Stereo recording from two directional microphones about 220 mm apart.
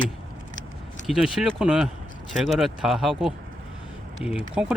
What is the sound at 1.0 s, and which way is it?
Speech, centre (ahead or behind).